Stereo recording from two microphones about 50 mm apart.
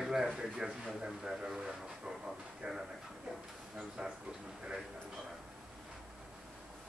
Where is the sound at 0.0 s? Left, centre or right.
Centre.